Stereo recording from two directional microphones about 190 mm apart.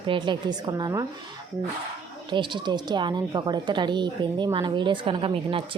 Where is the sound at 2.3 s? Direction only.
25° right (ahead or behind).